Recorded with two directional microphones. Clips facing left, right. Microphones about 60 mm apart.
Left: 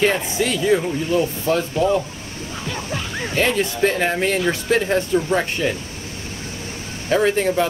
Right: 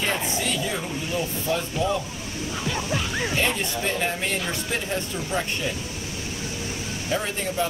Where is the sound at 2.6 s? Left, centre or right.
Centre.